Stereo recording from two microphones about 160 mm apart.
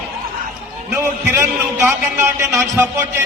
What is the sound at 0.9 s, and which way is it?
A man's voice, 15° right (ahead or behind).